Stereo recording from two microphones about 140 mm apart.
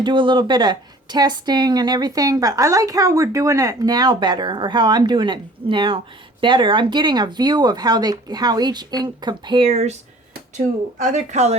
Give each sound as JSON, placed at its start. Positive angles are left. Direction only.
{"t": 0.0, "sound": "a woman's voice", "side_deg": -35}
{"t": 9.6, "sound": "speech", "side_deg": -50}
{"t": 10.9, "sound": "a woman's voice", "side_deg": -65}